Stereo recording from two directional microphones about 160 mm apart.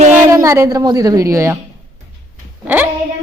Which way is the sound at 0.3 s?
20° right (ahead or behind).